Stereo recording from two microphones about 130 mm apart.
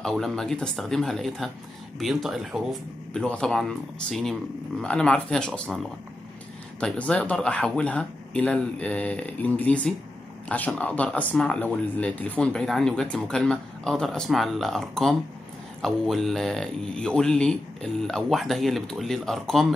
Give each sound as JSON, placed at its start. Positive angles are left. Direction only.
{"t": 0.0, "sound": "speech", "side_deg": 5}